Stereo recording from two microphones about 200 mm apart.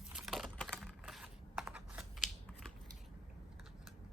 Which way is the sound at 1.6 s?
5° right (ahead or behind).